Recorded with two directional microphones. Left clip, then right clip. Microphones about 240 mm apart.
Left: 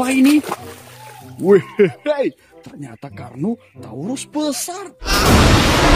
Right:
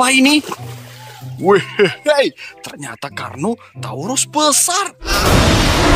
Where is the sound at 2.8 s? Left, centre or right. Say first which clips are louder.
Right 9 dB; right.